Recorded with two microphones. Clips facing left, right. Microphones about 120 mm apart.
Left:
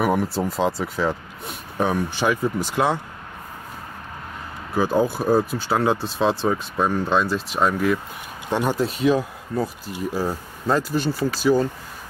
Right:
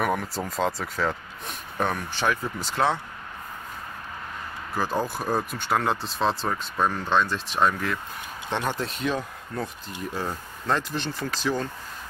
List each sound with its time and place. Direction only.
0.0 s speech: 5° left (ahead or behind)
4.7 s speech: 10° left (ahead or behind)